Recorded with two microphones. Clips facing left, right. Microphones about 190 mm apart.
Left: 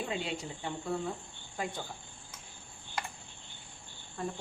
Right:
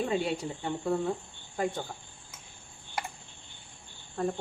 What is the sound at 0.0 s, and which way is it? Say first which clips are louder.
Speech: right 7 dB; 45° right (ahead or behind).